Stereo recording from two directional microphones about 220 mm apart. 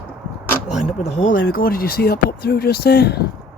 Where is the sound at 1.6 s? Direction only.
40° left (ahead or behind).